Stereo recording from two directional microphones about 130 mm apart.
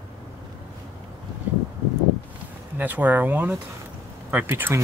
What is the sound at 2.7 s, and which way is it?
Speech, 15° right (ahead or behind).